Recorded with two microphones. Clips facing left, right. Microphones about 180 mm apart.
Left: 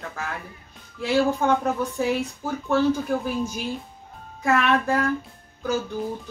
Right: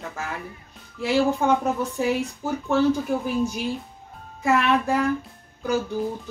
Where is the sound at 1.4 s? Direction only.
15° right (ahead or behind).